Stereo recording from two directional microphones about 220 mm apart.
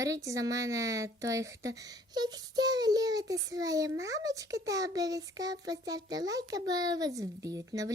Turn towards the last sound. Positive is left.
turn(degrees=-15)  # may be behind; listen again after turning